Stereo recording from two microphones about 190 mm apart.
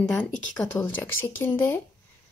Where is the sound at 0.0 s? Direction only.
5° left (ahead or behind).